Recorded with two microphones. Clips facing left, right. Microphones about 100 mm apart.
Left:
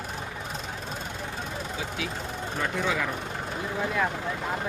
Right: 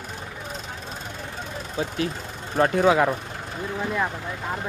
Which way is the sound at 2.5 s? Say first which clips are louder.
Right 10 dB; 65° right (ahead or behind).